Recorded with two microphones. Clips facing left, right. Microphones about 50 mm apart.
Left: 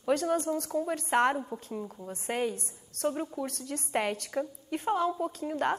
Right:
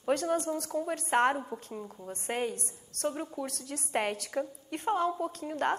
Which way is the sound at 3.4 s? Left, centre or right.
Left.